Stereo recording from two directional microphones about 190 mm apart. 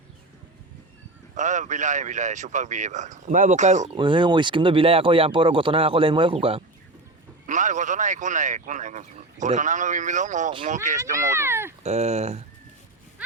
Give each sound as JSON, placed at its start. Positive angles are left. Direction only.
{"t": 1.4, "sound": "speech", "side_deg": -40}
{"t": 3.9, "sound": "speech", "side_deg": -25}
{"t": 7.4, "sound": "speech", "side_deg": -40}
{"t": 11.3, "sound": "speech", "side_deg": -15}
{"t": 11.8, "sound": "speech", "side_deg": -35}